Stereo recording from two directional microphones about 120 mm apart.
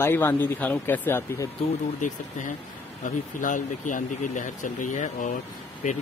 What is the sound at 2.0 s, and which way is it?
Speech, 90° left.